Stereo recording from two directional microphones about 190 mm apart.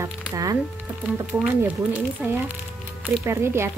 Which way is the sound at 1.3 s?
5° right (ahead or behind).